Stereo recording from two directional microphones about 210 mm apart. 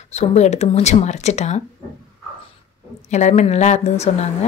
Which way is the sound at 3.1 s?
35° left (ahead or behind).